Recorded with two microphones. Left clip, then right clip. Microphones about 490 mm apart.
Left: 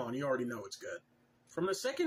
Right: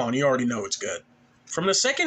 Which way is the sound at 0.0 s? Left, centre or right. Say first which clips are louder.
Right 13 dB; left.